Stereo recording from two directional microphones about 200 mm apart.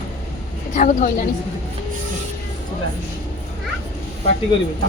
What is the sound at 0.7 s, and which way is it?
Speech, 40° left (ahead or behind).